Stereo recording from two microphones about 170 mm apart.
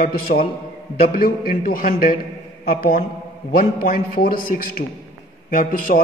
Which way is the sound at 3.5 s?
55° left (ahead or behind).